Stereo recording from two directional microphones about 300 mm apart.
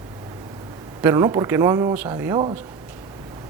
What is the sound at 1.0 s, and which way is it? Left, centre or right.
A man's voice, centre.